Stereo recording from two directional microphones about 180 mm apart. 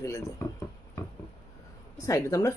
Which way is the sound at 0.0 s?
15° left (ahead or behind).